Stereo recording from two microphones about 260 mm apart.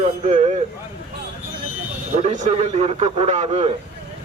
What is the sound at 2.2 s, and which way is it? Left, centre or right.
A man's voice, right.